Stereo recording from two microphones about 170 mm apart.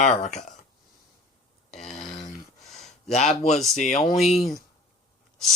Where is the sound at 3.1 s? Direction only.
40° left (ahead or behind).